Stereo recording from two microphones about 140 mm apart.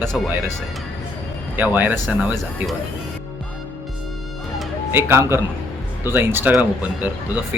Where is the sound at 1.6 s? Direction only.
10° right (ahead or behind).